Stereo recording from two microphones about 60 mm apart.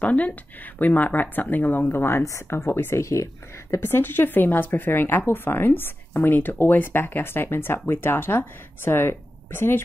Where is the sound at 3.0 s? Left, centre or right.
Left.